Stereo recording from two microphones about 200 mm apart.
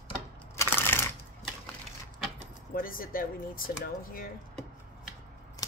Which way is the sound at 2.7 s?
45° left (ahead or behind).